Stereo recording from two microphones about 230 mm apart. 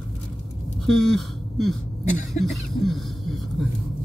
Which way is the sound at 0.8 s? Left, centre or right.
Centre.